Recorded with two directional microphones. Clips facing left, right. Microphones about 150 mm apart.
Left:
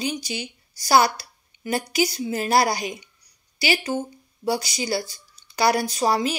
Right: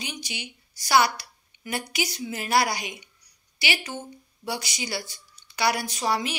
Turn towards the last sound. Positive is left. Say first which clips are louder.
# left 5 dB
turn(degrees=35)  # may be behind; listen again after turning